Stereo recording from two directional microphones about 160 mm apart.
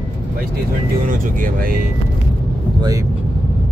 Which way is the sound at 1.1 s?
60° right (ahead or behind).